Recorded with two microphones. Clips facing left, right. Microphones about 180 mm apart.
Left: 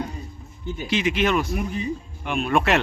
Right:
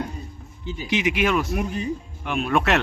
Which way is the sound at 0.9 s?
15° right (ahead or behind).